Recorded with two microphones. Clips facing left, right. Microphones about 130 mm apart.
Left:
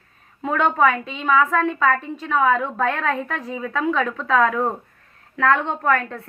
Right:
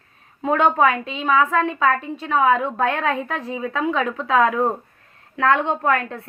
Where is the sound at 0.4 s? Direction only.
30° right (ahead or behind).